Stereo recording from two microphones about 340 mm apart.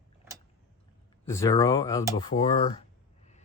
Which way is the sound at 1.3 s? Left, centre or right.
Centre.